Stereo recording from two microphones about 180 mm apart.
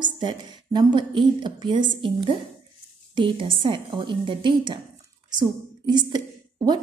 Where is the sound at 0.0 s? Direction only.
25° right (ahead or behind).